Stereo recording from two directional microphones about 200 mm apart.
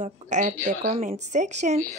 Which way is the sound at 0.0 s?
35° right (ahead or behind).